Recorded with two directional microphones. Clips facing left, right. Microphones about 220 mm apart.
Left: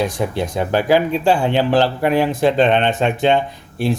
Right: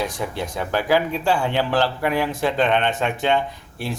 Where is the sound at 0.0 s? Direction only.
20° left (ahead or behind).